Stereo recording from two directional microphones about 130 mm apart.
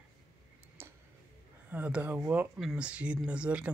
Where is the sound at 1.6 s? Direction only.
15° right (ahead or behind).